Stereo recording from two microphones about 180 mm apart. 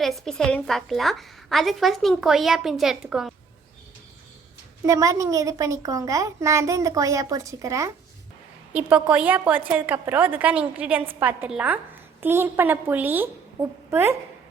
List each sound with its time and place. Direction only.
0.0 s a woman's voice: centre (ahead or behind)
4.9 s a woman's voice: 20° right (ahead or behind)